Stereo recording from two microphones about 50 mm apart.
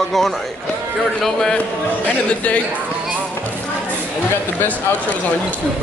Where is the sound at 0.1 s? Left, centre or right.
Centre.